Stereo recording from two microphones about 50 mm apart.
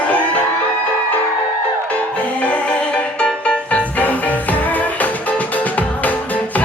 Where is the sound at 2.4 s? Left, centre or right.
Left.